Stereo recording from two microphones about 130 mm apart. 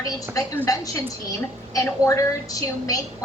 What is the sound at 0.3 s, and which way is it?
A woman's voice, 25° left (ahead or behind).